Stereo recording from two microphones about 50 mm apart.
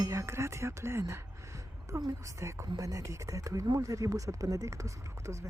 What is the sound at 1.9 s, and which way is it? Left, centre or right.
A woman's voice, right.